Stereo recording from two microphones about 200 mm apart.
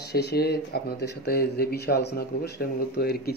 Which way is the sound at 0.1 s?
55° left (ahead or behind).